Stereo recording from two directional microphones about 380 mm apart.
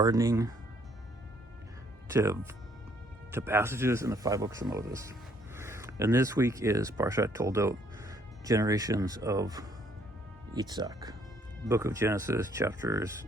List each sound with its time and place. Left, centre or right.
0.0 s speech: centre
2.0 s speech: centre